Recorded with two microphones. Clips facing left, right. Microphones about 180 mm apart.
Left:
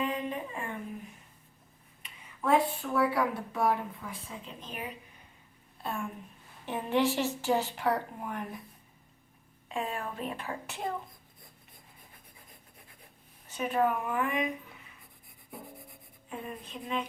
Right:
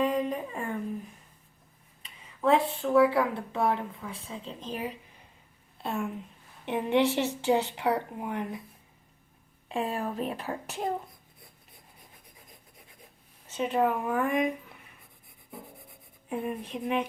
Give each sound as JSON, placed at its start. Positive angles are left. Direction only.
{"t": 0.0, "sound": "a sound", "side_deg": -35}
{"t": 2.0, "sound": "a woman's voice", "side_deg": -30}
{"t": 9.7, "sound": "speech", "side_deg": -35}
{"t": 13.5, "sound": "speech", "side_deg": -25}
{"t": 14.1, "sound": "a woman's voice", "side_deg": -45}
{"t": 16.3, "sound": "speech", "side_deg": -60}